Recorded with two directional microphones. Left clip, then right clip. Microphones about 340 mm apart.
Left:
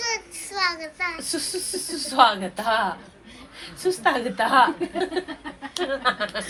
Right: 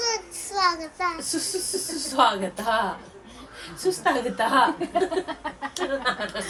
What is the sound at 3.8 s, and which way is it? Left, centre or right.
Speech, centre.